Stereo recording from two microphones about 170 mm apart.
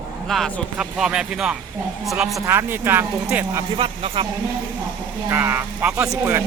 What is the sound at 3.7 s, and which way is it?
Speech, 30° right (ahead or behind).